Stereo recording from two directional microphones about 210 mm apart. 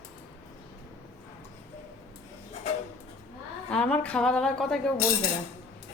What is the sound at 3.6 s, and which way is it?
A woman's voice, 5° left (ahead or behind).